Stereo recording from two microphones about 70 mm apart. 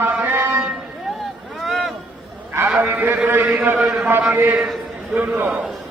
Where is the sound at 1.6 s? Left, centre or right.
Centre.